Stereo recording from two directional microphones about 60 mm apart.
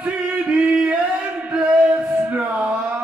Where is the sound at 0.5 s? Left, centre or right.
Centre.